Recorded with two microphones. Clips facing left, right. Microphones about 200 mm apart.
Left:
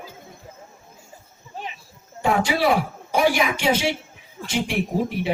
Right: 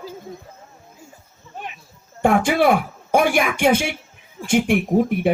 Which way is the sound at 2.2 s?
55° right (ahead or behind).